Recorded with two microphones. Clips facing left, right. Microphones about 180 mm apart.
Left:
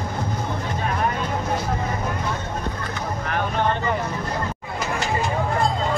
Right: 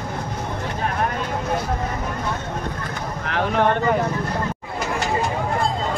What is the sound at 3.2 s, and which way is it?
Vehicle, 80° right.